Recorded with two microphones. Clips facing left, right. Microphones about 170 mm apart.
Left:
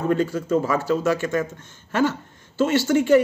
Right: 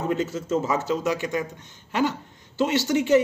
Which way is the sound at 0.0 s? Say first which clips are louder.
Left 4 dB; 20° right (ahead or behind).